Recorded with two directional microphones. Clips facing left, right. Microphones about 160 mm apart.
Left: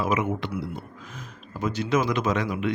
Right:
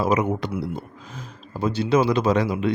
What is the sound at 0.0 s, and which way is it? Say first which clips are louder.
Speech: right 4 dB; 35° right (ahead or behind).